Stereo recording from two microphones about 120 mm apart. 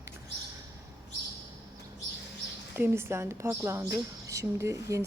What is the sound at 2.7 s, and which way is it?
A woman's voice, 20° right (ahead or behind).